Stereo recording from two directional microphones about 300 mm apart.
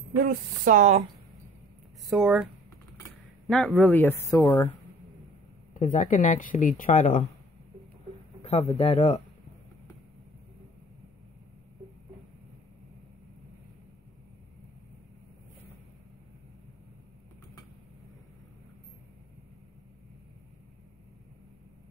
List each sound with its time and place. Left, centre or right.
0.2 s speech: right
2.0 s speech: centre
3.4 s speech: centre
5.8 s speech: left
8.4 s a sound: left
8.7 s speech: left